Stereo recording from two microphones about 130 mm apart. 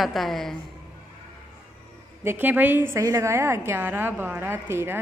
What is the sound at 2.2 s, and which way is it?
A woman's voice, 15° right (ahead or behind).